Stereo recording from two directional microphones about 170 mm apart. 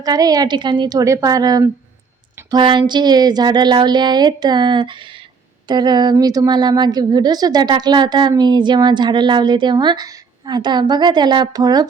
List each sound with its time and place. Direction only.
0.0 s a woman's voice: 20° right (ahead or behind)